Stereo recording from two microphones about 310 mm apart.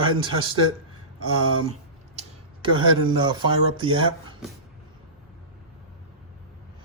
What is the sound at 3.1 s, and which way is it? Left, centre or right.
Speech, centre.